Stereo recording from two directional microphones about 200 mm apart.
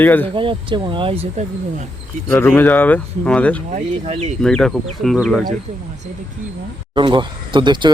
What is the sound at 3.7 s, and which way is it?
Speech, 30° right (ahead or behind).